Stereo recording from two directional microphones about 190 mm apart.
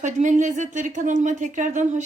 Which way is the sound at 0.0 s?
40° right (ahead or behind).